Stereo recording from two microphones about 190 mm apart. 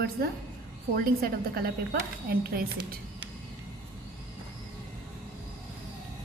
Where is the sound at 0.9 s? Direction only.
55° right (ahead or behind).